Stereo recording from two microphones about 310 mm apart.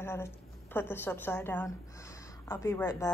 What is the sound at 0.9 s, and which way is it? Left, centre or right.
A woman's voice, centre.